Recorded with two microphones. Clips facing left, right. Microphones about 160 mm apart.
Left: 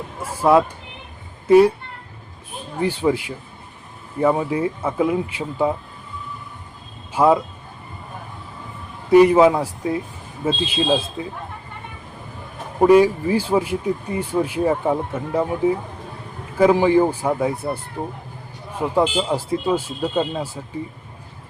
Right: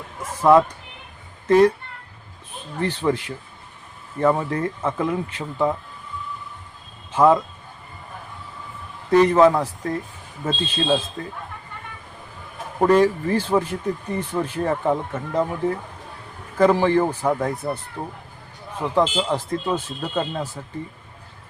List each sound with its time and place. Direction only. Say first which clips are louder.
0.2 s a sound: right 1 dB; 10° left (ahead or behind)
1.5 s speech: left 3 dB; 10° left (ahead or behind)
2.7 s speech: left 3 dB; 10° left (ahead or behind)
7.1 s speech: even; 10° left (ahead or behind)
9.0 s speech: left 3 dB; 10° left (ahead or behind)
12.8 s speech: left 3 dB; 10° left (ahead or behind)